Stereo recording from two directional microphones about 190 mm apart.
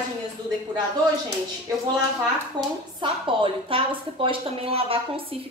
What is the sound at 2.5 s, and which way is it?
Speech, 25° right (ahead or behind).